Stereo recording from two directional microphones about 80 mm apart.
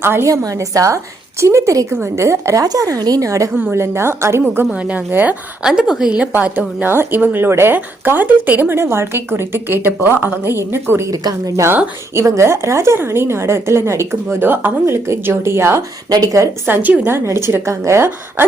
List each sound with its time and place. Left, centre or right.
0.0 s speech: right
0.3 s a woman's voice: right
2.6 s a woman's voice: right
4.4 s speech: right
5.6 s a woman's voice: centre; by 11.0 s right
11.1 s a woman's voice: right
12.1 s a woman's voice: right
16.0 s a woman's voice: right
16.6 s a woman's voice: right